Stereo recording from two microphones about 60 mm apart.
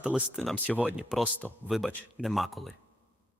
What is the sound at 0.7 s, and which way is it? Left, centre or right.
Speech, centre.